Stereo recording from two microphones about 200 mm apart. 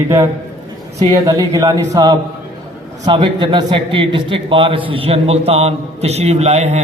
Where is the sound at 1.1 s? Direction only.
15° right (ahead or behind).